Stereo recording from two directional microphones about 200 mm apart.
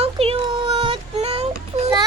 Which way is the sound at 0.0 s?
30° right (ahead or behind).